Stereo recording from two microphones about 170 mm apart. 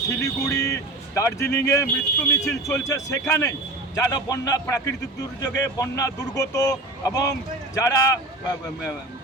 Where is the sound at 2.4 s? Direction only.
20° left (ahead or behind).